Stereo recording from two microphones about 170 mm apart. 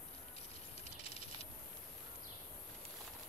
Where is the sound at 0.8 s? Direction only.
35° left (ahead or behind).